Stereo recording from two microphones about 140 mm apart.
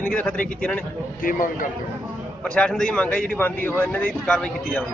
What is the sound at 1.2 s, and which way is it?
Speech, 80° left.